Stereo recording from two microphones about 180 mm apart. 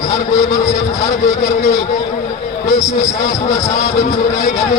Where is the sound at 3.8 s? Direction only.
40° left (ahead or behind).